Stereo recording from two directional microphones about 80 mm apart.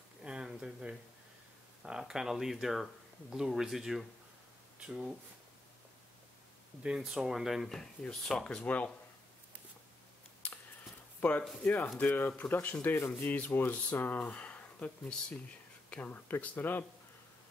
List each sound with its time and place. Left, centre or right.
0.2 s a sound: centre
1.8 s speech: centre
7.0 s speech: centre
11.1 s speech: left